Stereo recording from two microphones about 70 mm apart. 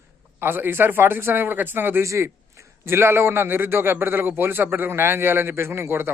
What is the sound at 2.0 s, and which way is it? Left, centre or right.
A man's voice, right.